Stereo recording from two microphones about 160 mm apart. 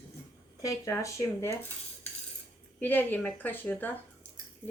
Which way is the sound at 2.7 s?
10° left (ahead or behind).